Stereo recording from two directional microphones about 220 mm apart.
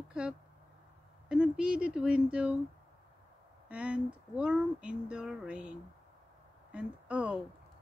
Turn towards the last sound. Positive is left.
turn(degrees=-5)  # may be behind; listen again after turning